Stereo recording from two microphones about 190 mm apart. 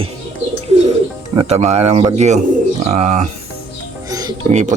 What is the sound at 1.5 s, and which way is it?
Speech, 35° right (ahead or behind).